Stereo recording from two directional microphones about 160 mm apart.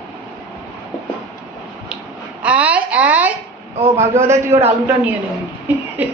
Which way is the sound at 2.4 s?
10° right (ahead or behind).